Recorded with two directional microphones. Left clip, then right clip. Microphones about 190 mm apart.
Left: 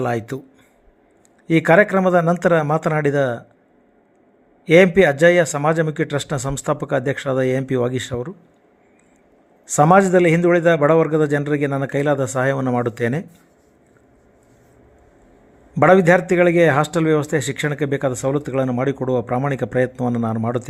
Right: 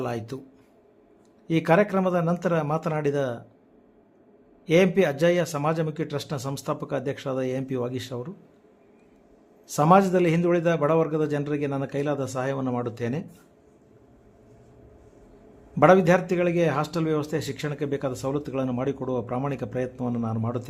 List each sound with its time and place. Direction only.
0.0 s a man's voice: 20° left (ahead or behind)
1.5 s a man's voice: 25° left (ahead or behind)
4.6 s a man's voice: 25° left (ahead or behind)
9.7 s a man's voice: 25° left (ahead or behind)
15.7 s a man's voice: 25° left (ahead or behind)